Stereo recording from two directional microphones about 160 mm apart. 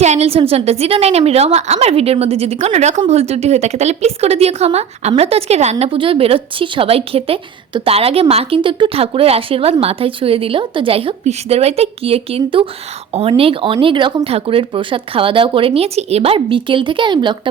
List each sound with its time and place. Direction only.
0.0 s speech: 45° right (ahead or behind)